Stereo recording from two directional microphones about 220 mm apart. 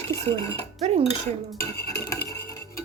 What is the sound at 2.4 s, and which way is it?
Music, 15° left (ahead or behind).